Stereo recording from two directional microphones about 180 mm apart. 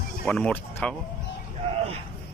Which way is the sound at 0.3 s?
5° left (ahead or behind).